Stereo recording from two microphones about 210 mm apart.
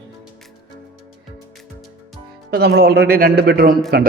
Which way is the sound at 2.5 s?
50° right (ahead or behind).